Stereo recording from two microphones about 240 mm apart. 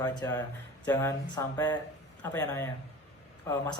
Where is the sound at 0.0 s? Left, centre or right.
Centre.